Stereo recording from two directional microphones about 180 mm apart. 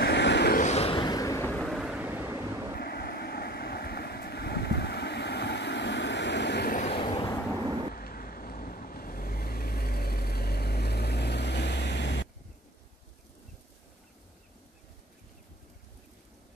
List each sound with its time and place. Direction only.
0.0 s vehicle: 70° left (ahead or behind)
0.6 s a sound: 35° left (ahead or behind); by 1.6 s 15° left (ahead or behind)
1.6 s vehicle: centre (ahead or behind)
2.8 s vehicle: 60° left (ahead or behind)
6.8 s vehicle: 30° left (ahead or behind)
7.9 s vehicle: 55° left (ahead or behind); by 12.3 s 75° left (ahead or behind)